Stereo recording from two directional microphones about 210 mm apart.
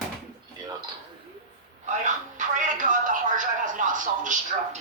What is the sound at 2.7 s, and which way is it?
Television, 40° right (ahead or behind).